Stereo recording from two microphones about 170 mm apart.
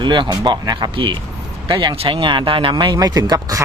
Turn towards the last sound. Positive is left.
turn(degrees=-20)  # may be behind; listen again after turning